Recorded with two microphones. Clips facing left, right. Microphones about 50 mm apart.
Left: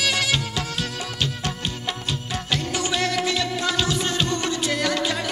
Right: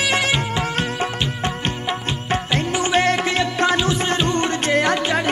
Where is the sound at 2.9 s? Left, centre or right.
Right.